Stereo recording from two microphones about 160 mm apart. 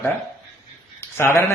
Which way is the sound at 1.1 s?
15° left (ahead or behind).